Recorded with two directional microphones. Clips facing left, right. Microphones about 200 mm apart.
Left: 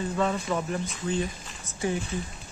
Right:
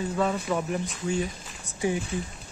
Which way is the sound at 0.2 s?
5° right (ahead or behind).